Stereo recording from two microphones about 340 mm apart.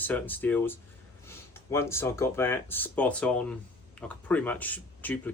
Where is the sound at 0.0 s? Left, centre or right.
Centre.